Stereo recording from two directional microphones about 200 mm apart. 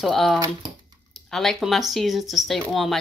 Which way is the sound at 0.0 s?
Centre (ahead or behind).